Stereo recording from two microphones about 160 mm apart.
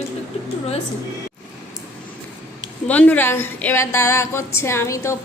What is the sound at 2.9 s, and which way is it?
A woman's voice, 10° left (ahead or behind).